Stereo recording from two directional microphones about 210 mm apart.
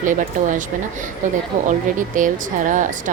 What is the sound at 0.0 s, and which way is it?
Speech, 40° right (ahead or behind).